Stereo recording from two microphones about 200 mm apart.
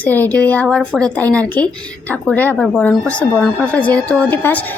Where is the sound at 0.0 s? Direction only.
10° left (ahead or behind).